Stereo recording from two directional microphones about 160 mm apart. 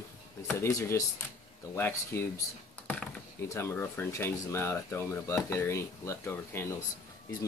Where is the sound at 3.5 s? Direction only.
15° left (ahead or behind).